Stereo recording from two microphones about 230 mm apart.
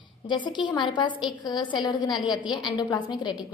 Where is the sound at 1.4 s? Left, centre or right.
Centre.